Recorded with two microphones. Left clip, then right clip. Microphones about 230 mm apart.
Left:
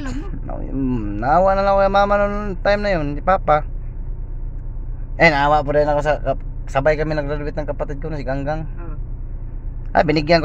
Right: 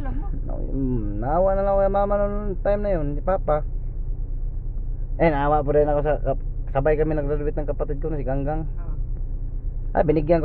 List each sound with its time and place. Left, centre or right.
0.1 s speech: centre
5.1 s speech: centre
9.9 s a man's voice: centre